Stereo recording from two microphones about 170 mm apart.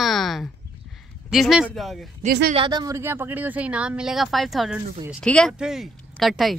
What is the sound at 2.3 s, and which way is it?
Speech, 65° right (ahead or behind).